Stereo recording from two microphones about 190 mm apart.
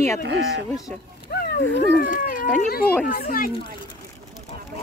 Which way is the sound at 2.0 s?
45° left (ahead or behind).